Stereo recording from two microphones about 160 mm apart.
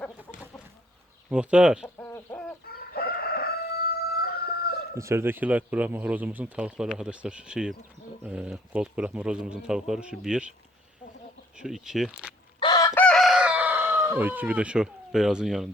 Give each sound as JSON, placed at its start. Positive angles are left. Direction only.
{"t": 1.3, "sound": "speech", "side_deg": -5}
{"t": 2.0, "sound": "chicken", "side_deg": 10}
{"t": 2.6, "sound": "chicken", "side_deg": 70}
{"t": 4.9, "sound": "a man's voice", "side_deg": -15}
{"t": 11.5, "sound": "a man's voice", "side_deg": -5}
{"t": 12.5, "sound": "chicken", "side_deg": 25}
{"t": 12.9, "sound": "chicken", "side_deg": 10}